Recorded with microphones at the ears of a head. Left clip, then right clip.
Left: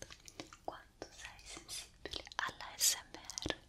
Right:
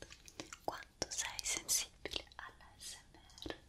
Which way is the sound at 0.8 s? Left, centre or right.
Right.